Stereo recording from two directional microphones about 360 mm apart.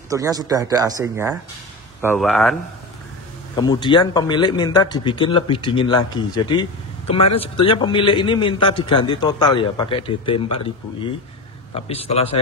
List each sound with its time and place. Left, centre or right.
0.1 s speech: centre
3.5 s speech: centre